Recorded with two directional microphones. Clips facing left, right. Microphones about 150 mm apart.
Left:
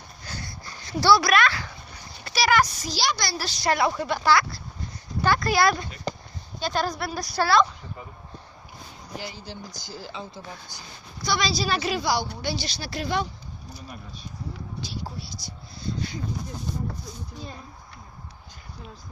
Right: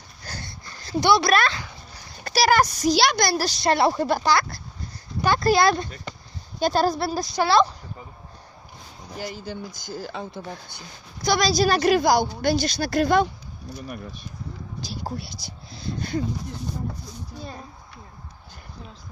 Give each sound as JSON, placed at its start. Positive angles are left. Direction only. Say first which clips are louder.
{"t": 0.4, "sound": "a sound", "louder": "left 1 dB", "side_deg": -25}
{"t": 2.2, "sound": "speech", "louder": "right 3 dB", "side_deg": -40}
{"t": 2.9, "sound": "speech", "louder": "right 7 dB", "side_deg": -60}
{"t": 3.6, "sound": "speech", "louder": "right 2 dB", "side_deg": -30}
{"t": 4.2, "sound": "a woman's voice", "louder": "even", "side_deg": -25}
{"t": 6.1, "sound": "basketball bounce", "louder": "left 7 dB", "side_deg": 35}
{"t": 6.7, "sound": "a woman's voice", "louder": "right 4 dB", "side_deg": -30}
{"t": 9.1, "sound": "speech", "louder": "right 4 dB", "side_deg": -45}
{"t": 11.2, "sound": "speech", "louder": "right 6 dB", "side_deg": -45}
{"t": 15.1, "sound": "speech", "louder": "right 5 dB", "side_deg": -60}